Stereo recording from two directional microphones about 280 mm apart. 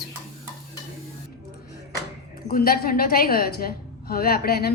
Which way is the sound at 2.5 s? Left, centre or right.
Left.